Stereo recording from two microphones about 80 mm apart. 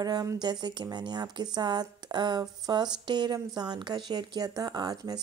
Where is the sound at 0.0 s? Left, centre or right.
Right.